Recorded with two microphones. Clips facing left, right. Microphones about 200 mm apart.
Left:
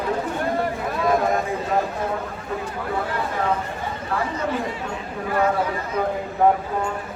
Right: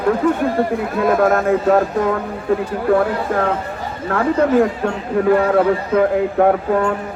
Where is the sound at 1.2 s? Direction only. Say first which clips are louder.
Right 8 dB; 65° right (ahead or behind).